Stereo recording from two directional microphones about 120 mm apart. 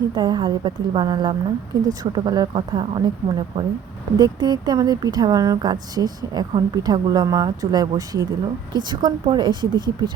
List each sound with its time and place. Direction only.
0.1 s a woman's voice: 35° right (ahead or behind)